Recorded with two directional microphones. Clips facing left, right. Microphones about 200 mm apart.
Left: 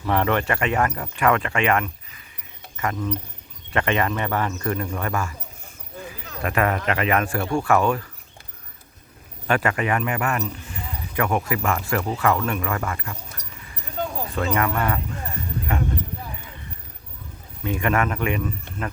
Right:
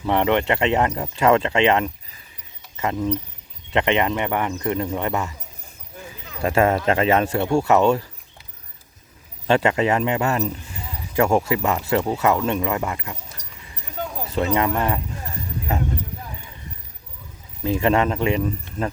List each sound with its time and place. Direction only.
0.0 s speech: 20° right (ahead or behind)
6.4 s speech: 25° right (ahead or behind)
9.5 s speech: 25° right (ahead or behind)
14.3 s speech: 25° right (ahead or behind)
17.6 s speech: 30° right (ahead or behind)